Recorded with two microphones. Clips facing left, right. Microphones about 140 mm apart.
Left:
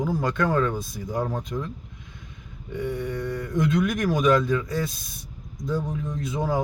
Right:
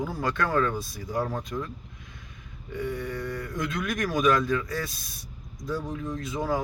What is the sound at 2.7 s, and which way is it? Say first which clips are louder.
Speech: left 3 dB; 20° left (ahead or behind).